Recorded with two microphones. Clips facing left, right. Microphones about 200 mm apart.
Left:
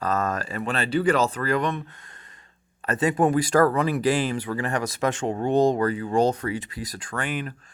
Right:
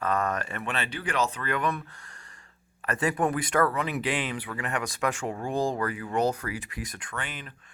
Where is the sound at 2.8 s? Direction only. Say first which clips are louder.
Left 5 dB; 25° left (ahead or behind).